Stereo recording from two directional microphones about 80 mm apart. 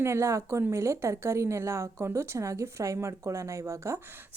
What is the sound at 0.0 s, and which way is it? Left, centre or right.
A woman's voice, right.